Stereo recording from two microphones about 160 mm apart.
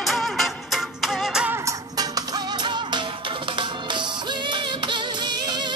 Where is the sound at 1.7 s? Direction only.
25° right (ahead or behind).